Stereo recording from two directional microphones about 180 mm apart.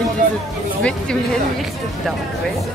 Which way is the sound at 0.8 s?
Centre (ahead or behind).